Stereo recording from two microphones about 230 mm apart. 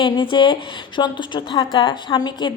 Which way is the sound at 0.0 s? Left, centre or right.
Left.